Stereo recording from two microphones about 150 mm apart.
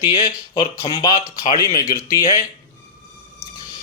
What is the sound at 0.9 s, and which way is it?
Speech, 30° left (ahead or behind).